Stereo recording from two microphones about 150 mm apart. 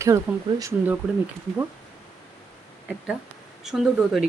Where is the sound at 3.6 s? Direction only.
Centre (ahead or behind).